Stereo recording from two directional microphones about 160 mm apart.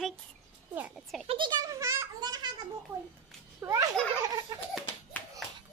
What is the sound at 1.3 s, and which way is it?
A child's voice, 30° right (ahead or behind).